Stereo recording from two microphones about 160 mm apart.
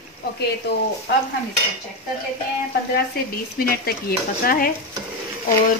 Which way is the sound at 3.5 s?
70° left (ahead or behind).